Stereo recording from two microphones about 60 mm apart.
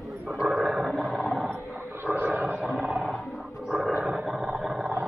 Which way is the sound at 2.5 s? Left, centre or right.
Centre.